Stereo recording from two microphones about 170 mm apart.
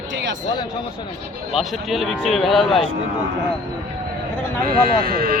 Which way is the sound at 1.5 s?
Centre (ahead or behind).